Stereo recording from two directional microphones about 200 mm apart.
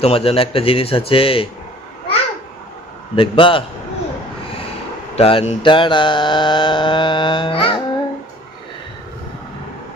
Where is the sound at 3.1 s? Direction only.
25° left (ahead or behind).